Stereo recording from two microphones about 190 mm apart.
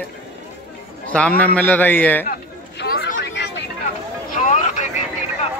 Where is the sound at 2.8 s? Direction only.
55° left (ahead or behind).